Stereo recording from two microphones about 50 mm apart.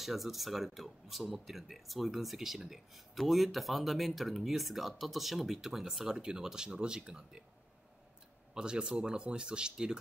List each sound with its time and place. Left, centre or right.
0.0 s speech: centre
8.5 s speech: centre